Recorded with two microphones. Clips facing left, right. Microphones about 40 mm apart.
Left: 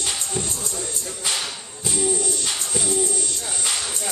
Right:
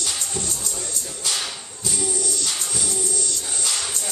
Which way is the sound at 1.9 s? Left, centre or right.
Centre.